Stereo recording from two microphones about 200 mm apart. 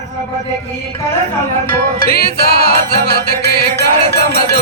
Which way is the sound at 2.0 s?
50° left (ahead or behind).